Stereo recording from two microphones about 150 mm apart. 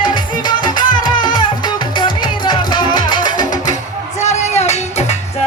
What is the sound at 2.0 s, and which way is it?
Music, 30° left (ahead or behind).